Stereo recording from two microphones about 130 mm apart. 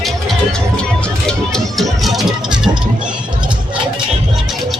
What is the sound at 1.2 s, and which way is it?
Music, centre (ahead or behind).